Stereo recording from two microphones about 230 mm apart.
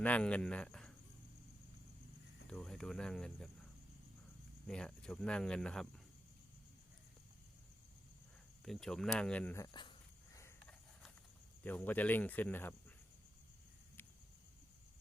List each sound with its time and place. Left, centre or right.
0.0 s speech: centre
2.5 s speech: centre
4.6 s speech: centre
8.6 s speech: centre
10.3 s a sound: centre
11.6 s speech: centre